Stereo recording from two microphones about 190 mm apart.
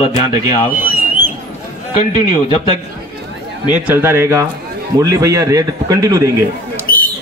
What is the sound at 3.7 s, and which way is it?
A man's voice, 10° right (ahead or behind).